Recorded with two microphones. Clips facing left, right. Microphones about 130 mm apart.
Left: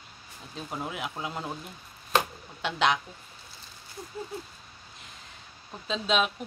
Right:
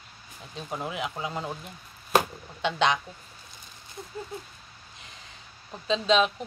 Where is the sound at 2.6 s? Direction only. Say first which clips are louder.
Right 1 dB; 5° left (ahead or behind).